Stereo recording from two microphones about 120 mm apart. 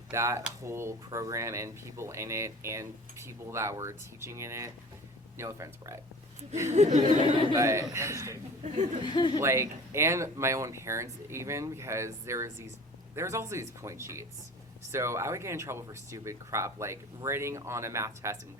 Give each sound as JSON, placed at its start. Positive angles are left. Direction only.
{"t": 0.1, "sound": "speech", "side_deg": -25}
{"t": 6.7, "sound": "speech", "side_deg": -75}
{"t": 7.5, "sound": "speech", "side_deg": -25}
{"t": 8.6, "sound": "speech", "side_deg": -80}
{"t": 9.0, "sound": "speech", "side_deg": 40}
{"t": 9.4, "sound": "speech", "side_deg": -20}